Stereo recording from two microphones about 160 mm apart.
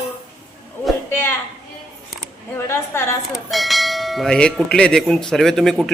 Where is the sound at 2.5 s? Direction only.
15° left (ahead or behind).